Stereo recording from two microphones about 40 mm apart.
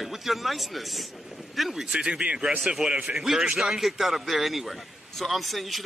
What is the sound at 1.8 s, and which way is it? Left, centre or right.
Speech, right.